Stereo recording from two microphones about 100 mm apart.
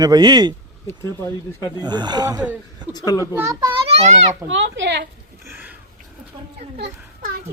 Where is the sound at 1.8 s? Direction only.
45° right (ahead or behind).